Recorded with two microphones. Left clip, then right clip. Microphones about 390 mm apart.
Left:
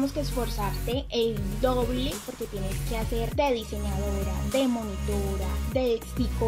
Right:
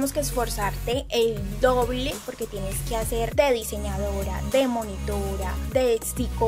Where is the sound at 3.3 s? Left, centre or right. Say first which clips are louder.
Right 5 dB; right.